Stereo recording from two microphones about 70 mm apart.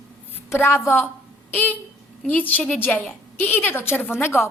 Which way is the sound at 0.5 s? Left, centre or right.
Left.